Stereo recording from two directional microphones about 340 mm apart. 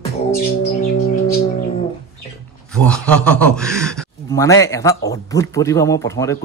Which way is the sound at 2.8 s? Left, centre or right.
Centre.